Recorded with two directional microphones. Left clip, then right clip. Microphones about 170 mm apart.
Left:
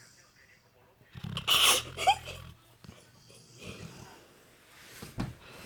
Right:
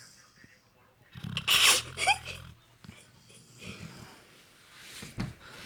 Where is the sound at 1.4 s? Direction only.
30° left (ahead or behind).